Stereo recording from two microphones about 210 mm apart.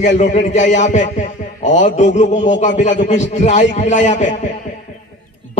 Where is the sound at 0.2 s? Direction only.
35° left (ahead or behind).